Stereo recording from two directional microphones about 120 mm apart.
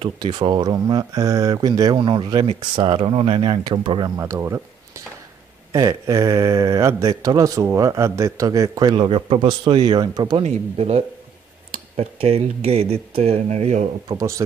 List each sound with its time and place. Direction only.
0.2 s speech: 35° right (ahead or behind)
4.2 s speech: 25° right (ahead or behind)
8.9 s speech: 50° right (ahead or behind)
10.4 s speech: 55° right (ahead or behind)